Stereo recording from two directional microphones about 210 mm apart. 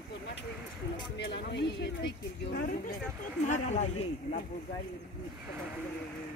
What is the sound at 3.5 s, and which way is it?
Speech, 35° left (ahead or behind).